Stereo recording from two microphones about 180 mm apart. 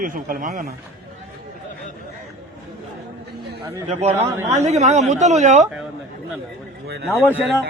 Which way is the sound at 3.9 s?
40° right (ahead or behind).